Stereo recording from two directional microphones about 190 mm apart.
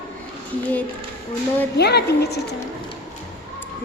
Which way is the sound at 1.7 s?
60° left (ahead or behind).